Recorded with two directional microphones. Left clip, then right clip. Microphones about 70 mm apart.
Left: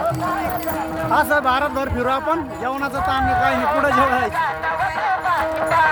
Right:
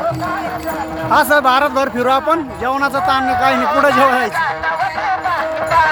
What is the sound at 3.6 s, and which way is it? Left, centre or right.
Music, right.